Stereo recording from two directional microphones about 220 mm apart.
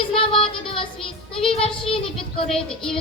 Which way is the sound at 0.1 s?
25° left (ahead or behind).